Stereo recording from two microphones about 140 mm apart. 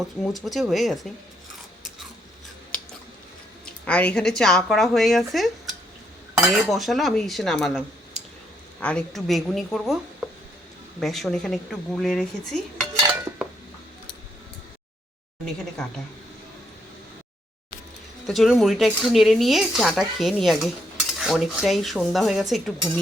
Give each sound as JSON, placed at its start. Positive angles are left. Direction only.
{"t": 0.2, "sound": "speech", "side_deg": 0}
{"t": 3.8, "sound": "speech", "side_deg": 10}
{"t": 6.3, "sound": "cutlery", "side_deg": 0}
{"t": 8.8, "sound": "speech", "side_deg": 5}
{"t": 13.1, "sound": "dishes", "side_deg": -15}
{"t": 18.3, "sound": "speech", "side_deg": 0}